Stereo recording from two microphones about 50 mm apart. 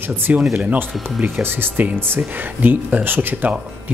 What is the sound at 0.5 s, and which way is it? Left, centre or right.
Speech, right.